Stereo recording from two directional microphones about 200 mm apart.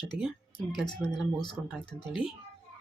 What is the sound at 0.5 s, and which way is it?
Speech, centre (ahead or behind).